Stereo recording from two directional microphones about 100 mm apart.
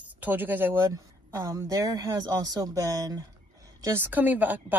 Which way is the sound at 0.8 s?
30° right (ahead or behind).